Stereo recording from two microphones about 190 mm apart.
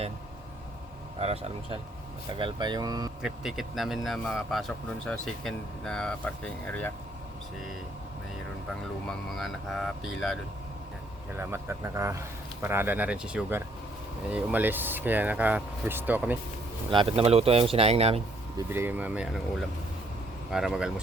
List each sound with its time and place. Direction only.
1.2 s speech: 30° right (ahead or behind)
3.2 s speech: centre (ahead or behind)
8.7 s speech: centre (ahead or behind)
11.3 s speech: 15° right (ahead or behind)
16.9 s speech: 25° right (ahead or behind)
18.7 s speech: 10° right (ahead or behind)